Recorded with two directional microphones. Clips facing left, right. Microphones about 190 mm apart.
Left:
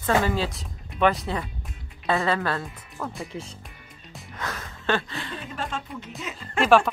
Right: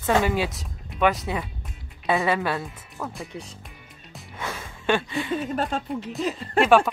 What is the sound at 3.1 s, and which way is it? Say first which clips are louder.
Speech: left 1 dB; centre (ahead or behind).